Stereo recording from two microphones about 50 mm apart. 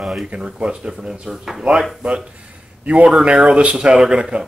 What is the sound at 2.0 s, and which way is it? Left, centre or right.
Speech, right.